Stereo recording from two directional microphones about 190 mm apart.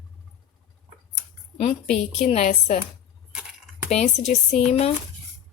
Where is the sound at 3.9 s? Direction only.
35° left (ahead or behind).